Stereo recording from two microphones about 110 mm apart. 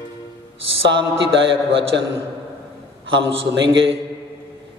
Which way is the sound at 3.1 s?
50° right (ahead or behind).